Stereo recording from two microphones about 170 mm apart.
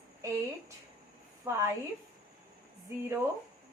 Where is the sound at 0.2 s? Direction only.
15° right (ahead or behind).